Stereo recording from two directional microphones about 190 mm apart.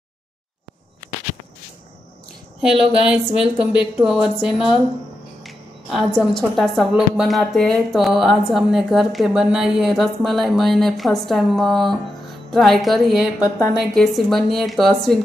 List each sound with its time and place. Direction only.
3.0 s a woman's voice: 5° right (ahead or behind)